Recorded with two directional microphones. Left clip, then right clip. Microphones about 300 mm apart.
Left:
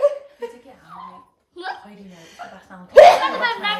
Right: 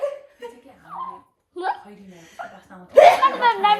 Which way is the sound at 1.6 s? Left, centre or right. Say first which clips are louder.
Right 5 dB; centre.